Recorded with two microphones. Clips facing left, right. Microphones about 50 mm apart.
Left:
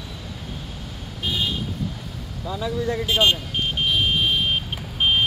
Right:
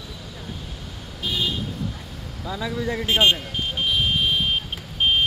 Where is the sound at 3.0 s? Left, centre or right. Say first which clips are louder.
Right 1 dB; right.